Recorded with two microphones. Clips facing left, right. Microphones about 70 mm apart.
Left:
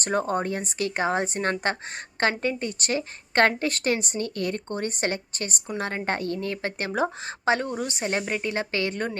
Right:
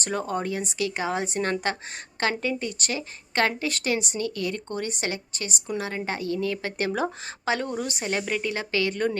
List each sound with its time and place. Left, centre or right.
0.0 s a woman's voice: left